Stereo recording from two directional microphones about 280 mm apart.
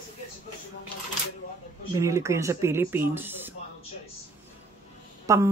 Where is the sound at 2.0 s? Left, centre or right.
Centre.